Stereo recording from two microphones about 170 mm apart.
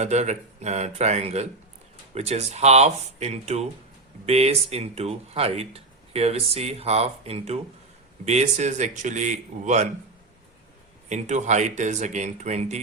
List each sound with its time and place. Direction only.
0.0 s speech: 40° right (ahead or behind)
11.1 s speech: 45° right (ahead or behind)